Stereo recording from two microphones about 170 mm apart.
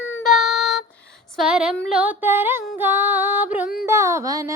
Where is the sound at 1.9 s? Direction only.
10° right (ahead or behind).